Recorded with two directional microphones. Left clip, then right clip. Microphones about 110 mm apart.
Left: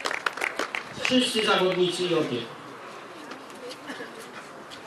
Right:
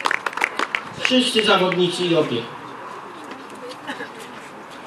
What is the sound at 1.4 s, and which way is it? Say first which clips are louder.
Speech: right 9 dB; 25° right (ahead or behind).